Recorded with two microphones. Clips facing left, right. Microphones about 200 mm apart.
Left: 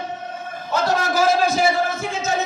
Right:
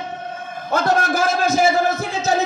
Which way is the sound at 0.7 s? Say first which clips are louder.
Right 2 dB; 50° right (ahead or behind).